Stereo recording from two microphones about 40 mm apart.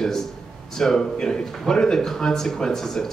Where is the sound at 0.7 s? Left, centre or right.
Centre.